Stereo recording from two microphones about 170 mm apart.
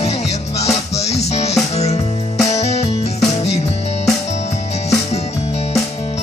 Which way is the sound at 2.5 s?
40° left (ahead or behind).